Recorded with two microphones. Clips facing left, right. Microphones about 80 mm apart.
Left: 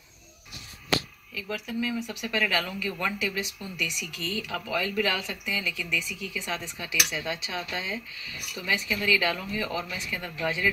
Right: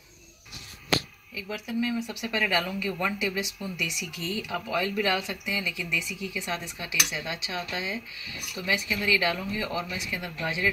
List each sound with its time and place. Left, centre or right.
1.3 s speech: centre
2.0 s speech: right